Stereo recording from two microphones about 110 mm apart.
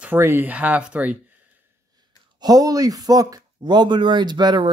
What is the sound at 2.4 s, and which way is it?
Speech, 35° right (ahead or behind).